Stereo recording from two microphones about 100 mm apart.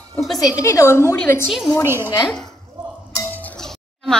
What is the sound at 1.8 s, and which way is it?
Speech, 25° right (ahead or behind).